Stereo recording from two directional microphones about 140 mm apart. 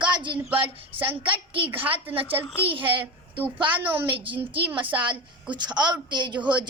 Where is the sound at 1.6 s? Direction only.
15° right (ahead or behind).